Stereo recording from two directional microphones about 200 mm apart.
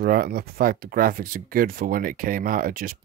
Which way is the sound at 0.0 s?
50° right (ahead or behind).